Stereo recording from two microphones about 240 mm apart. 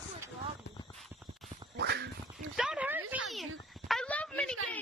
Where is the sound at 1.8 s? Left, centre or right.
Right.